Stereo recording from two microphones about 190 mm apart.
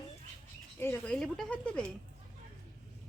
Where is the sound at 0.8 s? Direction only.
10° left (ahead or behind).